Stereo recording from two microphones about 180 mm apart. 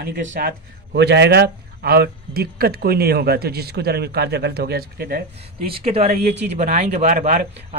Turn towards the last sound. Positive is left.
turn(degrees=-40)  # may be behind; listen again after turning